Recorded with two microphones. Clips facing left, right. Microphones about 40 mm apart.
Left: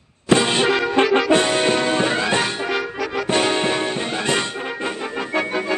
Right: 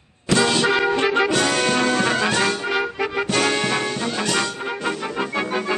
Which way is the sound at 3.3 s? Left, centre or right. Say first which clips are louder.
Left 3 dB; left.